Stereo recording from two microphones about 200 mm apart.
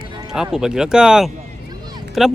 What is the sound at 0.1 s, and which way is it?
Music, 20° right (ahead or behind).